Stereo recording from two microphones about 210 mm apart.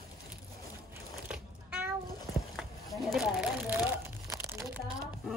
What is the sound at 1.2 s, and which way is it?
Cat, 5° right (ahead or behind).